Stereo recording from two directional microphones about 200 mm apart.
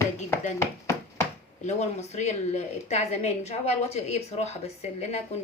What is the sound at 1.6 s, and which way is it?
A woman's voice, 35° left (ahead or behind).